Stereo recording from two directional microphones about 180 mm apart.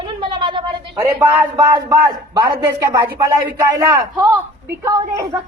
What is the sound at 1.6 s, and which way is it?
Speech, 20° right (ahead or behind).